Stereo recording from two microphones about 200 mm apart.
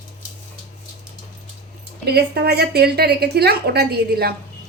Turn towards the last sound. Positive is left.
turn(degrees=-50)  # may be behind; listen again after turning